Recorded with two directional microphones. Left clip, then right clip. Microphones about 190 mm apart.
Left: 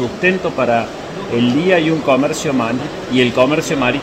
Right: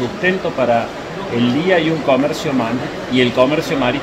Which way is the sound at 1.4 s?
45° left (ahead or behind).